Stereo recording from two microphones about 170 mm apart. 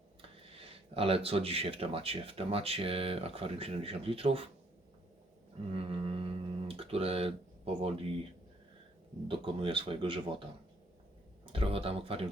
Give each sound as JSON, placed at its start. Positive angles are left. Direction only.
{"t": 0.2, "sound": "speech", "side_deg": -35}
{"t": 5.7, "sound": "a sound", "side_deg": -35}
{"t": 9.2, "sound": "speech", "side_deg": -30}
{"t": 11.5, "sound": "speech", "side_deg": -35}